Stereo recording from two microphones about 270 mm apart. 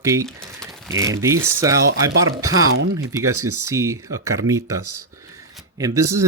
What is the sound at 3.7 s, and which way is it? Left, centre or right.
Speech, centre.